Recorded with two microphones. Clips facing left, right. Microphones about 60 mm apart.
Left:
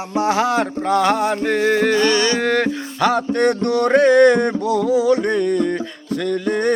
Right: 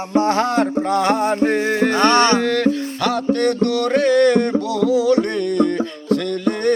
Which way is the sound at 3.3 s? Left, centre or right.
Left.